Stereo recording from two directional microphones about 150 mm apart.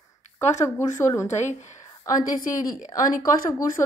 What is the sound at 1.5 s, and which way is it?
Speech, 50° left (ahead or behind).